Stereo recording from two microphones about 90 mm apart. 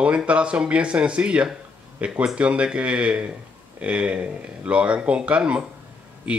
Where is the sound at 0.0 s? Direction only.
15° right (ahead or behind).